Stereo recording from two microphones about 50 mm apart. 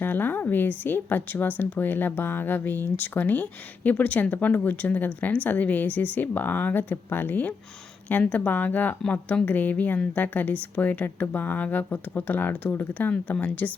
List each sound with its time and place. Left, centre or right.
0.0 s speech: left